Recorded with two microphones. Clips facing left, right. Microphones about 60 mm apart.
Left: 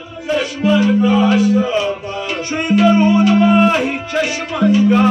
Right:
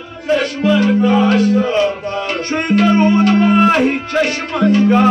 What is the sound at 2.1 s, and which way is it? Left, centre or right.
Music, right.